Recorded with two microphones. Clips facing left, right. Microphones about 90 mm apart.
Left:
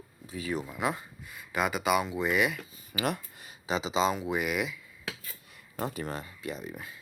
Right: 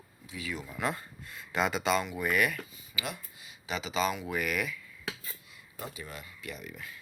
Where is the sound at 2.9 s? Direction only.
50° left (ahead or behind).